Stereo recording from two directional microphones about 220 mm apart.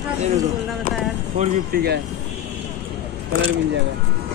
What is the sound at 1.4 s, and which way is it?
Speech, 45° right (ahead or behind).